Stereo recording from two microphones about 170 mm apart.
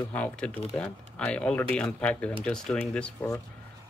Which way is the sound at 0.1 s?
5° left (ahead or behind).